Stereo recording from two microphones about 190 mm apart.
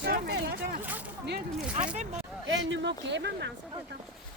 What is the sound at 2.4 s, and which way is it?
Speech, 75° right (ahead or behind).